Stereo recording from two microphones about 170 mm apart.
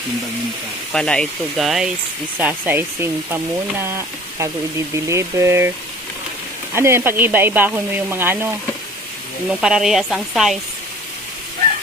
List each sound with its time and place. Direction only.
0.9 s speech: 5° left (ahead or behind); by 5.7 s 15° right (ahead or behind)
6.7 s speech: 15° right (ahead or behind)
9.5 s speech: 5° right (ahead or behind)